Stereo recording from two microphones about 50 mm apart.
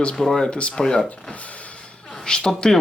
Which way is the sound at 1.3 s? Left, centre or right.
Left.